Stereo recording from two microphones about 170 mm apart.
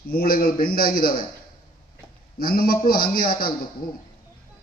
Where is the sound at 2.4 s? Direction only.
60° left (ahead or behind).